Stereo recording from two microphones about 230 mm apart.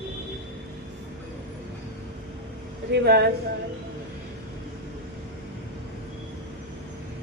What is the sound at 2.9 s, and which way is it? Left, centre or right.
Speech, right.